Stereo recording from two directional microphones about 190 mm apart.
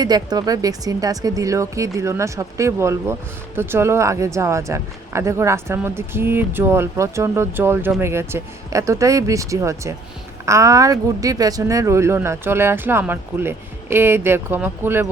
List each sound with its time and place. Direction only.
0.0 s speech: 20° right (ahead or behind)